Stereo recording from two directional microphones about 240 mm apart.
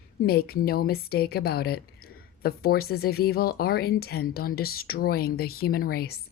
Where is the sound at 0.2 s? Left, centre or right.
Left.